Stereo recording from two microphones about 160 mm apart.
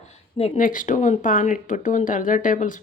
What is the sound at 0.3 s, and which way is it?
Speech, 40° left (ahead or behind).